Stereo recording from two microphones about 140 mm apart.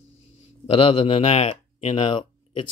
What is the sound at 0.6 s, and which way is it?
Speech, 45° left (ahead or behind).